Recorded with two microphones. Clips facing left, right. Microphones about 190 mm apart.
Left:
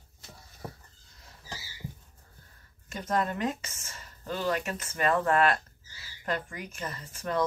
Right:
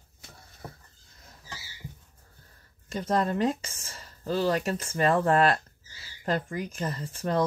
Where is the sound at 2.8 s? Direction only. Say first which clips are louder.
Right 3 dB; 30° right (ahead or behind).